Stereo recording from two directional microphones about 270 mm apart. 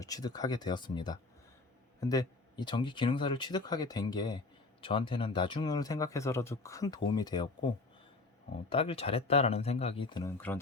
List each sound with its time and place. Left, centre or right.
0.0 s speech: centre
8.7 s speech: left